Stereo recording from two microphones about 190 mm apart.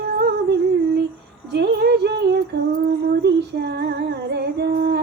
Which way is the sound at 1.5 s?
60° right (ahead or behind).